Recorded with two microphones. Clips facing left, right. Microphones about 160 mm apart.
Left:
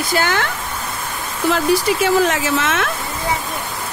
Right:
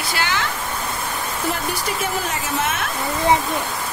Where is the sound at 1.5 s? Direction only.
90° left.